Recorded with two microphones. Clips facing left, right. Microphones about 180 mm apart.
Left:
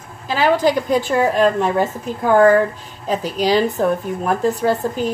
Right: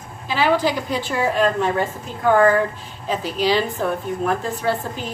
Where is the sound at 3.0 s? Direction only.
45° left (ahead or behind).